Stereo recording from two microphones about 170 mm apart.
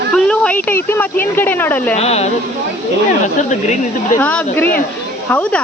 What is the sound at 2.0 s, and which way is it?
Speech, 40° left (ahead or behind).